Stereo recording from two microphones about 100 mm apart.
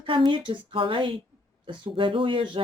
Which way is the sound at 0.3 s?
55° right (ahead or behind).